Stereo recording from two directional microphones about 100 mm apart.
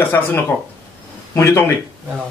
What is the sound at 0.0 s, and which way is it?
Speech, 20° left (ahead or behind).